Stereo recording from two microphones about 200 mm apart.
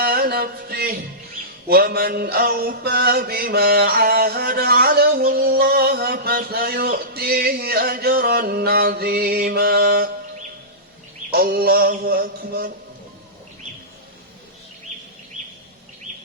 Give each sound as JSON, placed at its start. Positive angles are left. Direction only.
{"t": 0.0, "sound": "music", "side_deg": -50}
{"t": 1.6, "sound": "mantra", "side_deg": -50}
{"t": 11.3, "sound": "mantra", "side_deg": -50}